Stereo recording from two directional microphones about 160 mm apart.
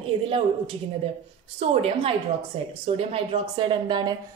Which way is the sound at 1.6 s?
35° right (ahead or behind).